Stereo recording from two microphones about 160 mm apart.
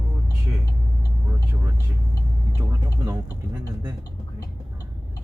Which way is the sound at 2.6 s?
20° right (ahead or behind).